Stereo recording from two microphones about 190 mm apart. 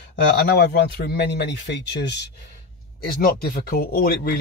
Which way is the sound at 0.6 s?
60° left (ahead or behind).